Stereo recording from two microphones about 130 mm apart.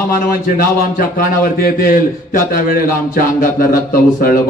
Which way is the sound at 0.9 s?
90° left.